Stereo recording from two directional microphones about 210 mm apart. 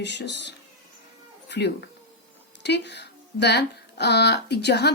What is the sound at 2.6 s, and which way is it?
Speech, 55° left (ahead or behind).